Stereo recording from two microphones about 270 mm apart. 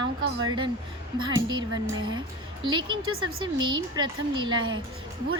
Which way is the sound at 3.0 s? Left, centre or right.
Right.